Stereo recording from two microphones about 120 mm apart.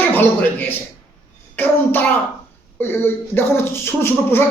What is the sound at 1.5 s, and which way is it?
A child's voice, 15° left (ahead or behind).